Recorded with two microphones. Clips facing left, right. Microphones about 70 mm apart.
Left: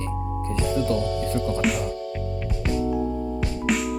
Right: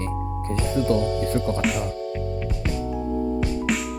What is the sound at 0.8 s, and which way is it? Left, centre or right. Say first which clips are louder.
Speech: right 4 dB; right.